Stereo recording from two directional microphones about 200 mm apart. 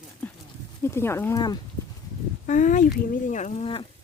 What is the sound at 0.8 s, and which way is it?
Speech, 15° left (ahead or behind).